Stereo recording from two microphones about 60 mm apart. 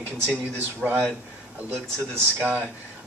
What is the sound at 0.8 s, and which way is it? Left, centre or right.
Speech, centre.